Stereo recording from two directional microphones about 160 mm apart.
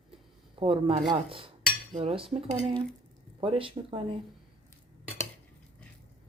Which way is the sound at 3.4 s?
35° right (ahead or behind).